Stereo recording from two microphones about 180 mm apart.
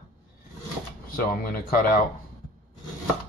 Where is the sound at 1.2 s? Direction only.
55° left (ahead or behind).